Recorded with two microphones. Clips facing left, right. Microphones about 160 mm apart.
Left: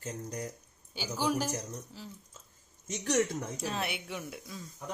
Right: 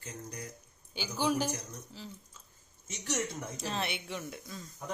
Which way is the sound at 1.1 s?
5° left (ahead or behind).